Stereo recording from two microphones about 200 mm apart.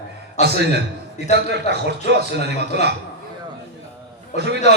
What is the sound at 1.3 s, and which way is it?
A man's voice, 55° right (ahead or behind).